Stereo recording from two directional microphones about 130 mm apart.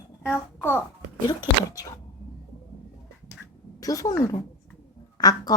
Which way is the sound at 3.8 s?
25° left (ahead or behind).